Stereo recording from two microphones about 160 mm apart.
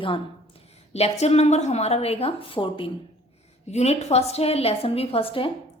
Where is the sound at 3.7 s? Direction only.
45° left (ahead or behind).